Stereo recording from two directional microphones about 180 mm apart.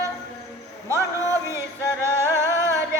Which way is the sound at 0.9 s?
15° right (ahead or behind).